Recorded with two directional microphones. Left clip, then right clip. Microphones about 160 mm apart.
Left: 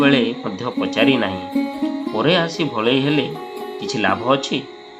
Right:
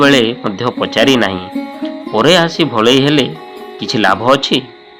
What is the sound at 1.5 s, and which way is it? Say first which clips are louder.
Music: right 1 dB; centre (ahead or behind).